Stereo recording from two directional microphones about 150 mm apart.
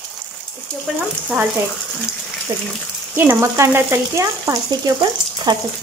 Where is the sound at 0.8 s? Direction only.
10° right (ahead or behind).